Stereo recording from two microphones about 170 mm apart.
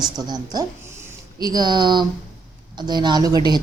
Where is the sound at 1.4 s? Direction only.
25° right (ahead or behind).